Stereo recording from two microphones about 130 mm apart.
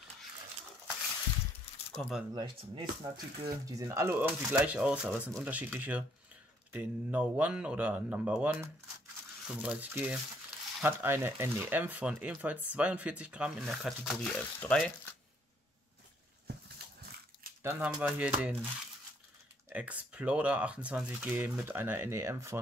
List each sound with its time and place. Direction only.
2.0 s speech: centre (ahead or behind)
2.3 s speech: 35° right (ahead or behind)
3.6 s speech: 25° right (ahead or behind)
4.5 s speech: 5° right (ahead or behind)
13.8 s speech: 5° left (ahead or behind)
17.6 s speech: 15° right (ahead or behind)
19.7 s speech: 10° right (ahead or behind)